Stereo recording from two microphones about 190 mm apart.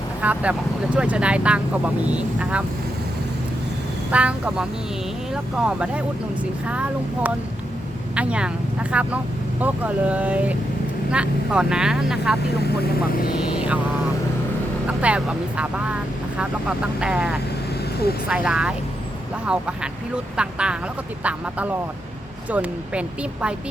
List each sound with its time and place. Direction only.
0.2 s speech: 10° right (ahead or behind)
4.1 s speech: 5° right (ahead or behind)
12.5 s speech: 55° left (ahead or behind)
13.4 s speech: 5° right (ahead or behind)
14.8 s speech: 5° right (ahead or behind)